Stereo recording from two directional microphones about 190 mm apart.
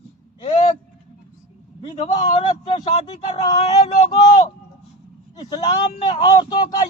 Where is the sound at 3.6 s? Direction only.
30° left (ahead or behind).